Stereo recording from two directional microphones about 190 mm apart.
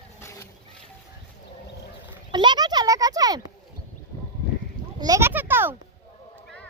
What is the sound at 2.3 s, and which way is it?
Speech, 25° right (ahead or behind).